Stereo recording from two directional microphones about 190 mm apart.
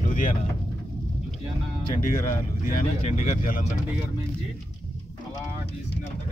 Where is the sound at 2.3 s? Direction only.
45° left (ahead or behind).